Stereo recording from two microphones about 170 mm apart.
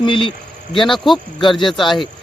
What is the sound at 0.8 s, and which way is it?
Speech, centre (ahead or behind).